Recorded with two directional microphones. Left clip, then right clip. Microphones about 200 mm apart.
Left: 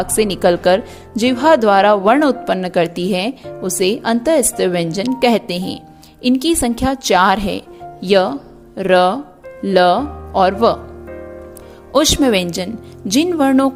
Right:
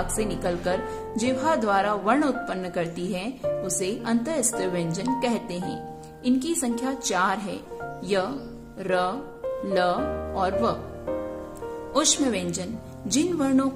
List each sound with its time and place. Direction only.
0.0 s a woman's voice: 45° left (ahead or behind)
11.9 s speech: 40° left (ahead or behind)